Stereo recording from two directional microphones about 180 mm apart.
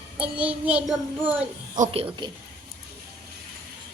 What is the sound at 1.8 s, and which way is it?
Speech, 30° right (ahead or behind).